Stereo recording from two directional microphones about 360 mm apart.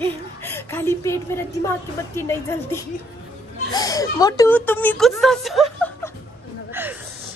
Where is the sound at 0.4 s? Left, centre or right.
Centre.